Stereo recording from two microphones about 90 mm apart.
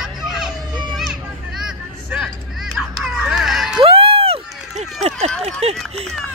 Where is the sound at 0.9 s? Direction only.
5° right (ahead or behind).